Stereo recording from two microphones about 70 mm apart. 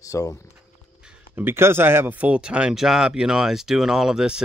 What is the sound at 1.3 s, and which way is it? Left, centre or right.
Speech, right.